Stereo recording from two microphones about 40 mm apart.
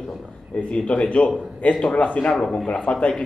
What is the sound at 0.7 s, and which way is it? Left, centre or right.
A man's voice, left.